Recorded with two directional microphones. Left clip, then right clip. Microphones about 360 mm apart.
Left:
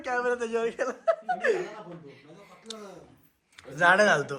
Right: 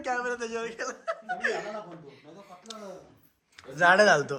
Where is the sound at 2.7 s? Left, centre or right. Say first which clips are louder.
Left 2 dB; centre.